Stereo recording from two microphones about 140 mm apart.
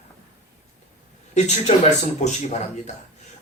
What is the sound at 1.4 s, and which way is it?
Speech, 55° left (ahead or behind).